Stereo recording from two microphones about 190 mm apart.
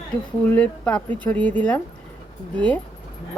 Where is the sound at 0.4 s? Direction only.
10° left (ahead or behind).